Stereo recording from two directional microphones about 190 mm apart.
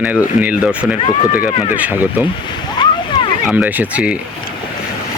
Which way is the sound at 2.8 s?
25° left (ahead or behind).